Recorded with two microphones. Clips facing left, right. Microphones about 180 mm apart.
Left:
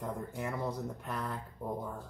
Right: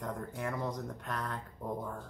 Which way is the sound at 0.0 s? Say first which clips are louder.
Even; 10° left (ahead or behind).